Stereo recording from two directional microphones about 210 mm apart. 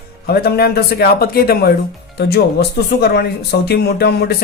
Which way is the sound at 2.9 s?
50° left (ahead or behind).